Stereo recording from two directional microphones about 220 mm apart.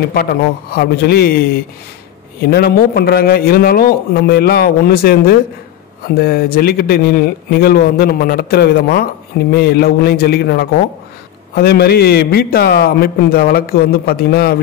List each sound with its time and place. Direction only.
0.1 s a man's voice: 45° left (ahead or behind)